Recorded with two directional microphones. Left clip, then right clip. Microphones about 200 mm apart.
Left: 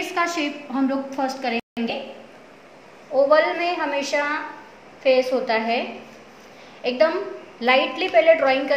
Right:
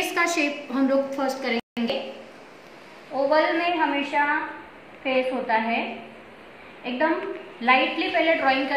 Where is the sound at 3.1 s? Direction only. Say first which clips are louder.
Left 6 dB; 55° left (ahead or behind).